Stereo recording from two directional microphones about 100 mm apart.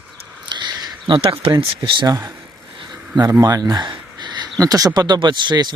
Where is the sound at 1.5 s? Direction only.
45° right (ahead or behind).